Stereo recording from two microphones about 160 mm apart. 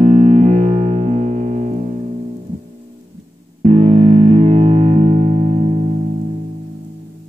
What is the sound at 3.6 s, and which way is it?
Music, 45° right (ahead or behind).